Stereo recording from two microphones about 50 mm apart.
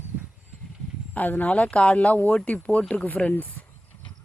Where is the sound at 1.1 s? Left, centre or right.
Left.